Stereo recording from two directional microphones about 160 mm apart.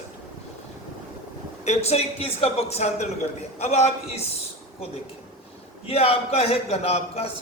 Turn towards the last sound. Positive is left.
turn(degrees=40)  # may be behind; listen again after turning